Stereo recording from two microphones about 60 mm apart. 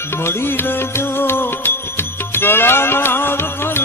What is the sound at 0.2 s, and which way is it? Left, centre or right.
Music, left.